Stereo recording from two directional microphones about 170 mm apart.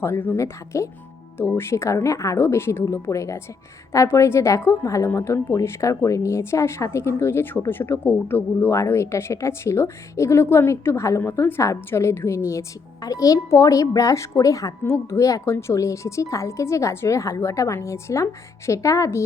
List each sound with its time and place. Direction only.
0.0 s a woman's voice: 15° left (ahead or behind)